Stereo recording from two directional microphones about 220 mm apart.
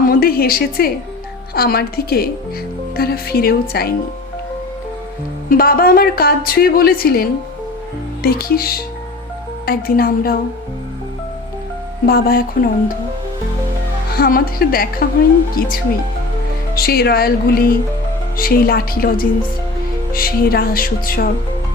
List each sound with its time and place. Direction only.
0.0 s a woman's voice: 40° left (ahead or behind)
5.5 s a woman's voice: 40° left (ahead or behind)
12.0 s a woman's voice: 45° left (ahead or behind)
14.1 s a woman's voice: 40° left (ahead or behind)
15.6 s music: 40° left (ahead or behind)
16.7 s a woman's voice: 45° left (ahead or behind)
18.3 s music: 40° left (ahead or behind)